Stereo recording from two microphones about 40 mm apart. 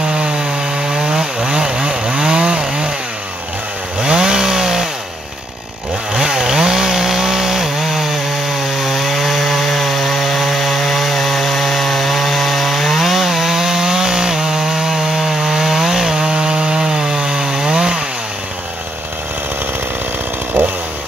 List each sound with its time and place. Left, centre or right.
0.1 s wood: right
4.0 s chainsaw: centre
6.1 s chainsaw: centre